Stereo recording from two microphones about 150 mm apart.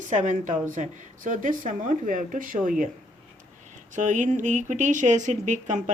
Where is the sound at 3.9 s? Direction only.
55° right (ahead or behind).